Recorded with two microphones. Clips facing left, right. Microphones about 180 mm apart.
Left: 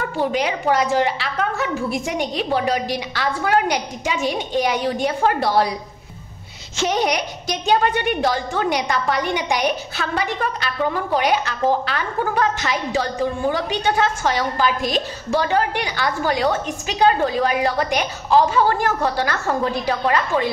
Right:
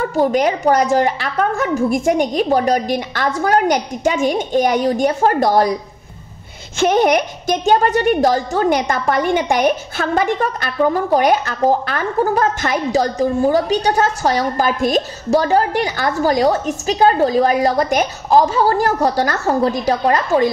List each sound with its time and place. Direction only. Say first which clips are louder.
0.1 s a woman's voice: right 6 dB; 45° right (ahead or behind)
6.8 s a woman's voice: right 7 dB; 50° right (ahead or behind)